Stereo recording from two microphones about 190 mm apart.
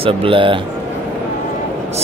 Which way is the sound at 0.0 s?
30° right (ahead or behind).